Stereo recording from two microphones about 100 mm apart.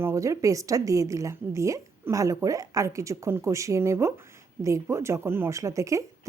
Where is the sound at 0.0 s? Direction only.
30° right (ahead or behind).